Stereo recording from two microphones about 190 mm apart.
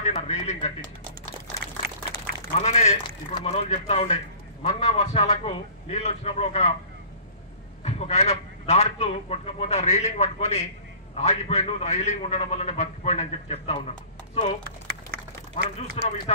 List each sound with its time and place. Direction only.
0.0 s speech: 35° left (ahead or behind)
2.6 s a man's voice: 35° left (ahead or behind)
7.8 s a man's voice: 35° left (ahead or behind)